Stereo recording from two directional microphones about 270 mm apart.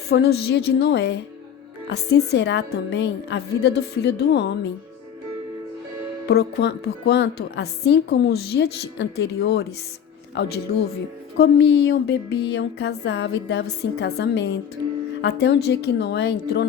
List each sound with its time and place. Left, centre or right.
0.1 s a woman's voice: left
6.2 s a woman's voice: left
11.3 s a woman's voice: left